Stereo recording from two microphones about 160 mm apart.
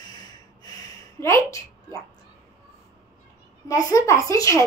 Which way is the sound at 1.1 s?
15° left (ahead or behind).